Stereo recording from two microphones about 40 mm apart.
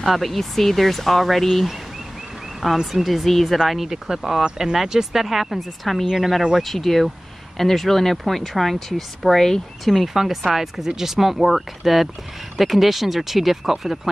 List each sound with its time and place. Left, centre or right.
0.0 s speech: centre
4.4 s speech: centre